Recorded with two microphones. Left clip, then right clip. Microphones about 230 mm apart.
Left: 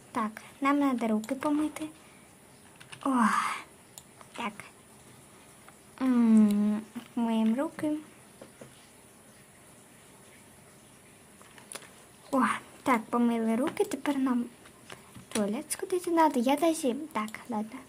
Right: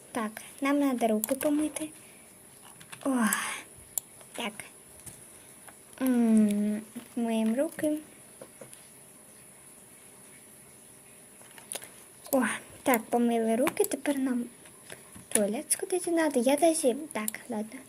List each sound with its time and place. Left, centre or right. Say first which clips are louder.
0.1 s speech: left 2 dB; centre
3.0 s speech: left 3 dB; centre
6.0 s speech: left 1 dB; centre
12.3 s speech: left 1 dB; centre
15.7 s speech: even; centre